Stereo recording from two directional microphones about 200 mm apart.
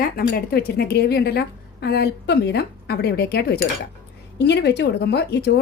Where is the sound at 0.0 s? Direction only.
45° left (ahead or behind).